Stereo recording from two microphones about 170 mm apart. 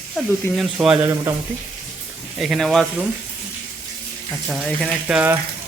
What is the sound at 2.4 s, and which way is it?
Speech, centre (ahead or behind).